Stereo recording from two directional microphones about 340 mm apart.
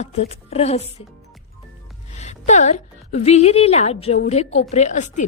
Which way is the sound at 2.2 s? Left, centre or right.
Centre.